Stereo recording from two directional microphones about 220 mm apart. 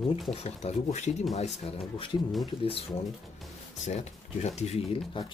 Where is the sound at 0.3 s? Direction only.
30° left (ahead or behind).